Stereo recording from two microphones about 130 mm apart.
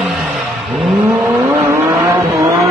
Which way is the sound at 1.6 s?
20° right (ahead or behind).